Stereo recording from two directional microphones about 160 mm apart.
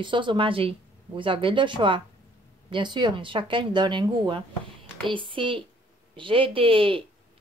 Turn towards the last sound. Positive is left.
turn(degrees=-35)  # may be behind; listen again after turning